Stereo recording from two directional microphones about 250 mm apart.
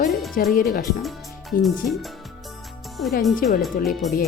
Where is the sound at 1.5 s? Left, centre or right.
Left.